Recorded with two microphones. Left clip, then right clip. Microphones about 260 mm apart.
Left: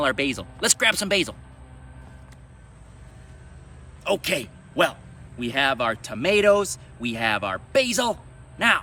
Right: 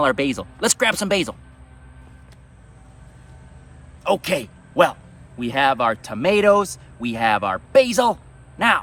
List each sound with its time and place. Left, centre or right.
0.0 s speech: centre
4.0 s speech: right